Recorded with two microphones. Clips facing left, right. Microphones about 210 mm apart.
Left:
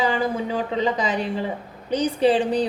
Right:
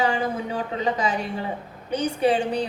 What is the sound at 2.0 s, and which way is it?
Speech, 35° left (ahead or behind).